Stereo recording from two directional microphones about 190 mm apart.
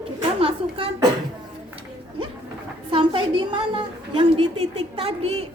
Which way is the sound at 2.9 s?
25° right (ahead or behind).